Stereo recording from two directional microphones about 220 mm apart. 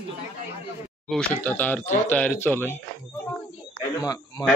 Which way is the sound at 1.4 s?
10° left (ahead or behind).